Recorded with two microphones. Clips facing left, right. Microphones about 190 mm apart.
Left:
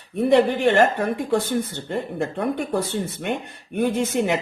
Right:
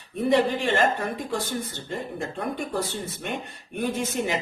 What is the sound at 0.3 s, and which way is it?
Speech, 60° left (ahead or behind).